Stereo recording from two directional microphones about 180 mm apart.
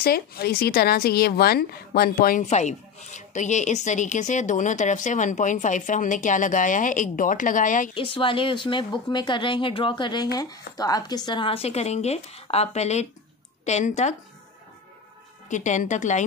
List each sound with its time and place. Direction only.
0.0 s a woman's voice: 55° left (ahead or behind)
7.9 s speech: 30° left (ahead or behind)
15.4 s a woman's voice: 45° left (ahead or behind)